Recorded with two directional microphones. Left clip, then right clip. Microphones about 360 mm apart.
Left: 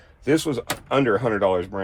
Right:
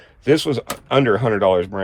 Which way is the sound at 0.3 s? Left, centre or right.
Right.